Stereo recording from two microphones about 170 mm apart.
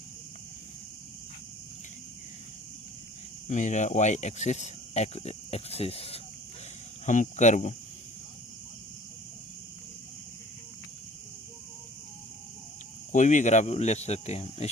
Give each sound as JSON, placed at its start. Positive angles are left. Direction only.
{"t": 3.4, "sound": "speech", "side_deg": 45}
{"t": 13.1, "sound": "speech", "side_deg": 45}